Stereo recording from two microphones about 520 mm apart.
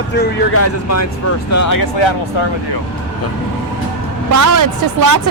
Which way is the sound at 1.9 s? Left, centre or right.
Left.